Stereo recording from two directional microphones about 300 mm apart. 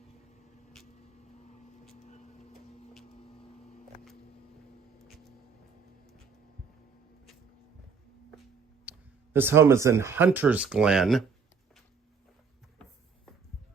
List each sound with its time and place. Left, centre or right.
2.0 s printer: left
8.9 s speech: centre